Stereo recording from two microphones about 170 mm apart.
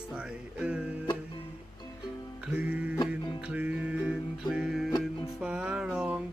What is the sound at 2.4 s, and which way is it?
Music, 10° right (ahead or behind).